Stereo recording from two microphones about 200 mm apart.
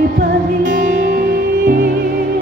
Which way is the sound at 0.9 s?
55° right (ahead or behind).